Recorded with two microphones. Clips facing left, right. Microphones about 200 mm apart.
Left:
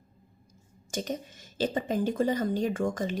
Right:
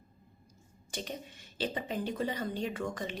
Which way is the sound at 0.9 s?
45° left (ahead or behind).